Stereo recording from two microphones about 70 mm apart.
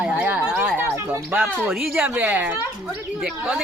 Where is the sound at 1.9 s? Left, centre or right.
Right.